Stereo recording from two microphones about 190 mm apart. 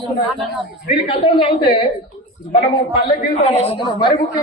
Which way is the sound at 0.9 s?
30° left (ahead or behind).